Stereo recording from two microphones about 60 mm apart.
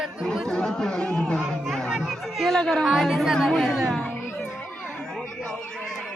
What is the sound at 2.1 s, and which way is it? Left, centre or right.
Speech, centre.